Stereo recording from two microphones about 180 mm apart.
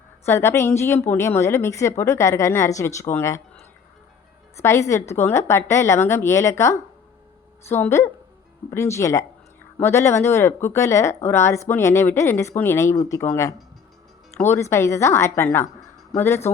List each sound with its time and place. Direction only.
0.3 s a woman's voice: 15° left (ahead or behind)
4.6 s a woman's voice: 15° left (ahead or behind)